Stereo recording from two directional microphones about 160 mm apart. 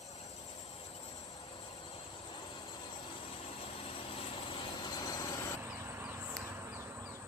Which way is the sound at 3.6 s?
35° left (ahead or behind).